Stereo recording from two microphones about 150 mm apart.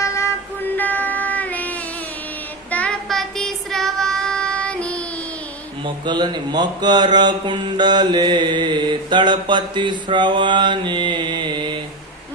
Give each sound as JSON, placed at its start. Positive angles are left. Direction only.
{"t": 0.0, "sound": "train", "side_deg": 20}
{"t": 0.8, "sound": "a sound", "side_deg": 10}
{"t": 2.6, "sound": "child singing", "side_deg": 10}
{"t": 5.8, "sound": "speech", "side_deg": -30}